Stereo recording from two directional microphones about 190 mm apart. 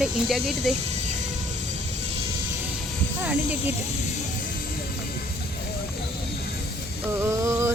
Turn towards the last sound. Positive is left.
turn(degrees=-15)  # may be behind; listen again after turning